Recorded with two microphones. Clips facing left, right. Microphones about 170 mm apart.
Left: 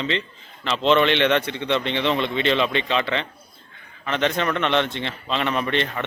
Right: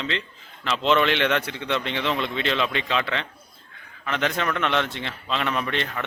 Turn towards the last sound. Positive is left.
turn(degrees=0)  # may be behind; listen again after turning